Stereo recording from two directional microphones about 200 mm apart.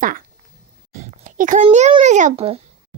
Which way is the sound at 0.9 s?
40° right (ahead or behind).